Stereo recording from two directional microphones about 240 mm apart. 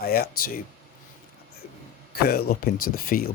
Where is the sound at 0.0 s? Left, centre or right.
Left.